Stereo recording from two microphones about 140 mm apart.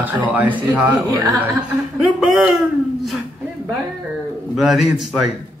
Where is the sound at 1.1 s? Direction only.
30° right (ahead or behind).